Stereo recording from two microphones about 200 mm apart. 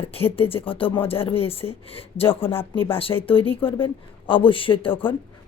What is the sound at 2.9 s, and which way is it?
Speech, 25° left (ahead or behind).